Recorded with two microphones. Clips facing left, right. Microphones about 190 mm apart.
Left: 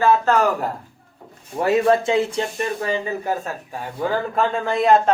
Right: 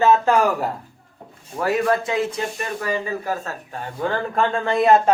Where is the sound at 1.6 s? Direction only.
25° left (ahead or behind).